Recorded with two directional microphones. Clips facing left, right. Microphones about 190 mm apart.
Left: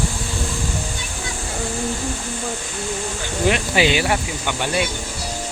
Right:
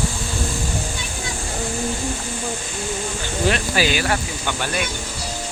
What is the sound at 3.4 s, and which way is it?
Speech, 20° left (ahead or behind).